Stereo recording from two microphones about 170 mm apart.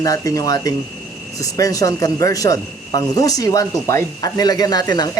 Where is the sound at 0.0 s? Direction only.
20° left (ahead or behind).